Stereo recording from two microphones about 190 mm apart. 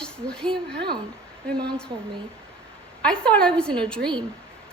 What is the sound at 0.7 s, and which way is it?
Speech, 60° right (ahead or behind).